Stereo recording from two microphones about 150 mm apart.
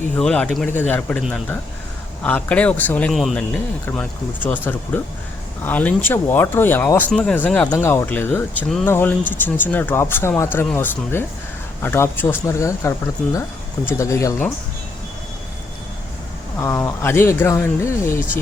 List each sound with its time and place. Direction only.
0.2 s speech: 5° left (ahead or behind)
2.2 s speech: 10° left (ahead or behind)
3.1 s speech: centre (ahead or behind); by 14.4 s 20° left (ahead or behind)
16.6 s speech: 20° left (ahead or behind)